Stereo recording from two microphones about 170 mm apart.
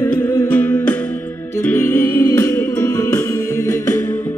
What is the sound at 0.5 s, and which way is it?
Music, 10° left (ahead or behind).